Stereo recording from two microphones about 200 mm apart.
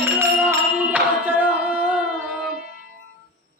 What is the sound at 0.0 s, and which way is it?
Music, 10° right (ahead or behind).